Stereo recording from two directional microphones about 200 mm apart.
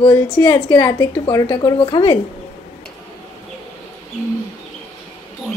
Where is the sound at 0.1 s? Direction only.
15° left (ahead or behind).